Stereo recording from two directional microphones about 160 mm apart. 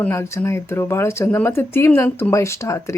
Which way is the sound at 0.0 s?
15° left (ahead or behind).